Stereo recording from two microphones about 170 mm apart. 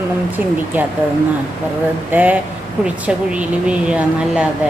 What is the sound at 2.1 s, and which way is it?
A woman's voice, 10° right (ahead or behind).